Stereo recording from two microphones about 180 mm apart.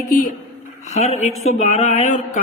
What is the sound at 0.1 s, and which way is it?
Speech, 50° left (ahead or behind).